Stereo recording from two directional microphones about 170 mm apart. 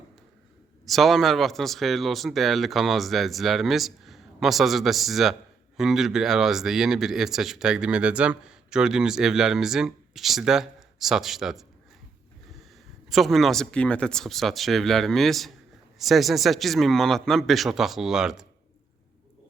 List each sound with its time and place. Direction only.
0.9 s speech: centre (ahead or behind)
13.1 s speech: centre (ahead or behind)